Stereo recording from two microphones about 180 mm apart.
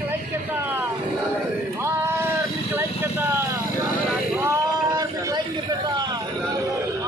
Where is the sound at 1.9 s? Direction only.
15° right (ahead or behind).